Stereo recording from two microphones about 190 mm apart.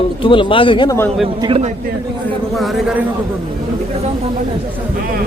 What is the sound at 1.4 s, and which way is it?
Speech, 30° right (ahead or behind).